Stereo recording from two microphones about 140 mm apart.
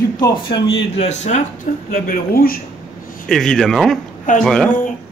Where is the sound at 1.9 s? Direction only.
90° left.